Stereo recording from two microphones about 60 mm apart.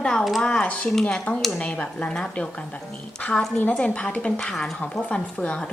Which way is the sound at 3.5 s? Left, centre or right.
Left.